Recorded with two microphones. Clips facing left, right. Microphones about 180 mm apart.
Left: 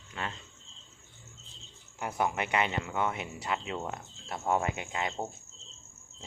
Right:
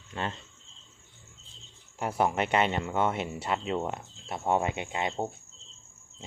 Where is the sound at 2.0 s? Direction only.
30° right (ahead or behind).